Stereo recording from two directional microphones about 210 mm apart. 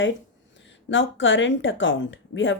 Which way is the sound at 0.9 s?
65° left (ahead or behind).